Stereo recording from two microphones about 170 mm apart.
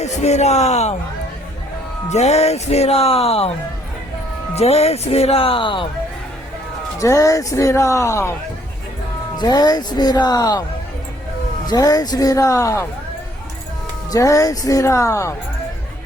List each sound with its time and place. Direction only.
0.0 s speech: 40° left (ahead or behind)
2.0 s speech: 40° left (ahead or behind)
4.5 s speech: 40° left (ahead or behind)
7.0 s speech: 20° left (ahead or behind)
9.4 s speech: 25° left (ahead or behind)
11.6 s speech: 25° left (ahead or behind)
14.1 s speech: 20° left (ahead or behind)